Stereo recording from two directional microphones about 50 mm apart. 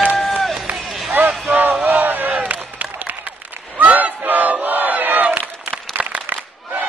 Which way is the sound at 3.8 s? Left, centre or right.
Right.